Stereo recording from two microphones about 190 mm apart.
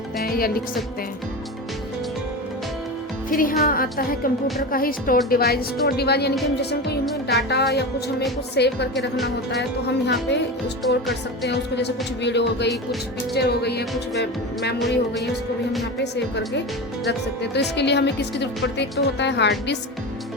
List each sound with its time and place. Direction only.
0.2 s music: 50° left (ahead or behind)
3.2 s speech: 45° left (ahead or behind); by 10.3 s 65° left (ahead or behind)
11.4 s speech: 65° left (ahead or behind)
14.8 s speech: centre (ahead or behind)
17.1 s speech: 60° left (ahead or behind)